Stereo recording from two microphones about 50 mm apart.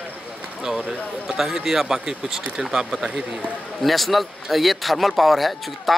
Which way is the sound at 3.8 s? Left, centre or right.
Centre.